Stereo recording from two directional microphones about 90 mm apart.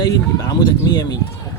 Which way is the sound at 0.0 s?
45° left (ahead or behind).